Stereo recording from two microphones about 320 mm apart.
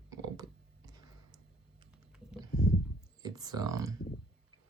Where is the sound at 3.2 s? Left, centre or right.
Centre.